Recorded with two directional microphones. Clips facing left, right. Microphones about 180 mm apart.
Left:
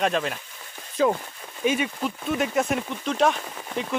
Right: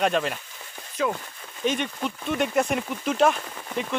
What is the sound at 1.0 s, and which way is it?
Speech, 30° left (ahead or behind).